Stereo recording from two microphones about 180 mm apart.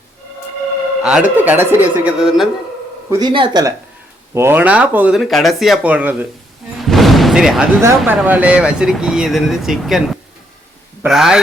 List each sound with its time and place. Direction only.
1.0 s speech: 5° right (ahead or behind)
3.1 s speech: 25° right (ahead or behind)
4.4 s speech: 10° right (ahead or behind)
6.7 s music: centre (ahead or behind)
7.8 s speech: 15° right (ahead or behind)
11.0 s speech: 5° right (ahead or behind)